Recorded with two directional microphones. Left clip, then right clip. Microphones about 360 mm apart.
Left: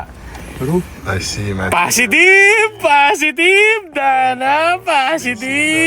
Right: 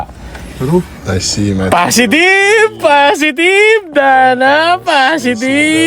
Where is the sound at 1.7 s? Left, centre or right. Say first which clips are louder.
Right 3 dB; right.